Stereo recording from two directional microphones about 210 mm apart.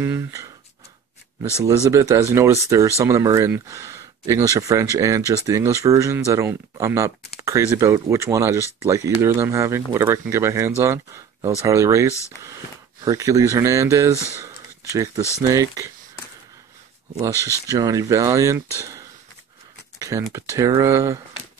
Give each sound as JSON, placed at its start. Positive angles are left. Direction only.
{"t": 0.0, "sound": "speech", "side_deg": -15}
{"t": 1.6, "sound": "speech", "side_deg": -15}
{"t": 12.1, "sound": "speech", "side_deg": 15}
{"t": 13.0, "sound": "speech", "side_deg": -15}
{"t": 17.6, "sound": "speech", "side_deg": -15}
{"t": 20.0, "sound": "a sound", "side_deg": -15}
{"t": 20.3, "sound": "speech", "side_deg": -15}